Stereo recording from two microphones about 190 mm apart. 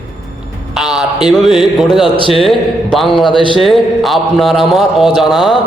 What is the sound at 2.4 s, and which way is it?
A man's voice, centre (ahead or behind).